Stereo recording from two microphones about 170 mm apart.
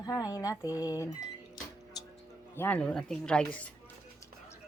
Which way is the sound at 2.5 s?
10° left (ahead or behind).